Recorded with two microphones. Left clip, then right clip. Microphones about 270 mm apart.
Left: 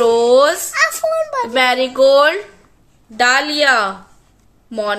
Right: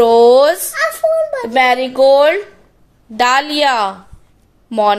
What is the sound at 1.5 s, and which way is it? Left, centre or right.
Speech, centre.